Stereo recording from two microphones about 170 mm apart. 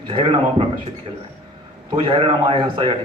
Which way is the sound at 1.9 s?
30° right (ahead or behind).